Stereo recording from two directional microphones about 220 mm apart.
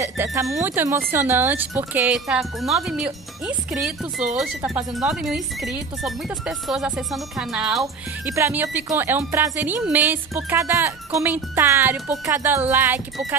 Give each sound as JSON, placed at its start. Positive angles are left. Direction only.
{"t": 0.0, "sound": "speech", "side_deg": -10}